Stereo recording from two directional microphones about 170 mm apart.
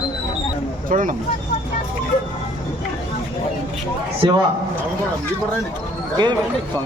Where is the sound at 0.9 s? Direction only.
50° right (ahead or behind).